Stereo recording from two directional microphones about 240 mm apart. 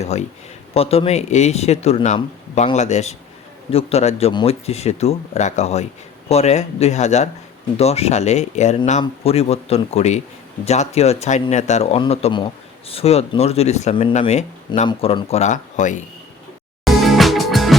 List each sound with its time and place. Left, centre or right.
0.0 s speech: left
16.8 s music: centre